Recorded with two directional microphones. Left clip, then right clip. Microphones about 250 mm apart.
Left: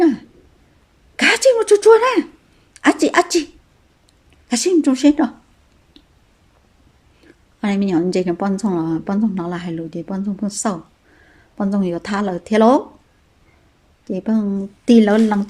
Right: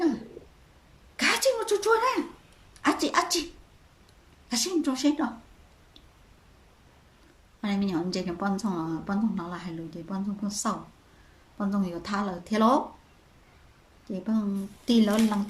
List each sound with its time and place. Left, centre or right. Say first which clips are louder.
1.1 s a sound: left 11 dB; left
2.7 s speech: left 10 dB; left
4.4 s a woman's voice: left 12 dB; left
7.6 s a woman's voice: left 11 dB; left
14.1 s a woman's voice: left 10 dB; left